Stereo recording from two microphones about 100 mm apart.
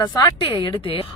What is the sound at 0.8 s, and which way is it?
Speech, 65° left (ahead or behind).